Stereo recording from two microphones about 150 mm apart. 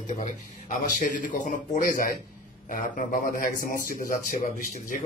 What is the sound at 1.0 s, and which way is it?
A man's voice, 55° left (ahead or behind).